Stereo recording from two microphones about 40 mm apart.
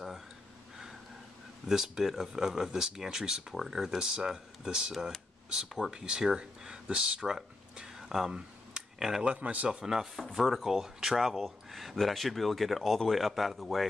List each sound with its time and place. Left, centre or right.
1.7 s speech: centre
8.4 s a sound: centre
9.3 s speech: right
9.7 s speech: centre